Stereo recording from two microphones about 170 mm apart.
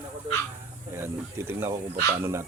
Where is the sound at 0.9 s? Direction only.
15° right (ahead or behind).